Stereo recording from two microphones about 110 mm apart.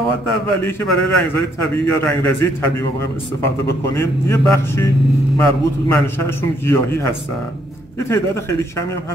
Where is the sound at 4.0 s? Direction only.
25° left (ahead or behind).